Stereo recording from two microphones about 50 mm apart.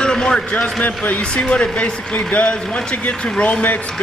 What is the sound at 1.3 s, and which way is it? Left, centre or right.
Speech, left.